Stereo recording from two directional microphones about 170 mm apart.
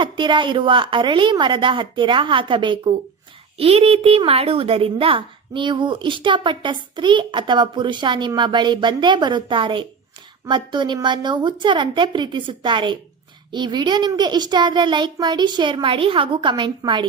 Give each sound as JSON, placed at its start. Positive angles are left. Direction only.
{"t": 0.0, "sound": "a woman's voice", "side_deg": -30}